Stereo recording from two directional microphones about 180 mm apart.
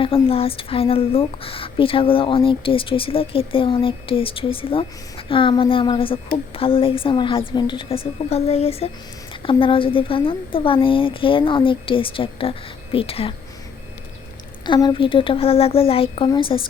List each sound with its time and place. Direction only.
0.0 s a woman's voice: 30° left (ahead or behind)
14.7 s speech: 25° left (ahead or behind)